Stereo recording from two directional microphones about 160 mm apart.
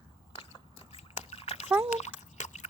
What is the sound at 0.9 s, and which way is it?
Splash, 40° left (ahead or behind).